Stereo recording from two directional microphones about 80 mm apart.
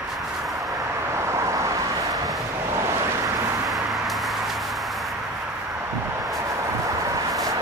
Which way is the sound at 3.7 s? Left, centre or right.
Centre.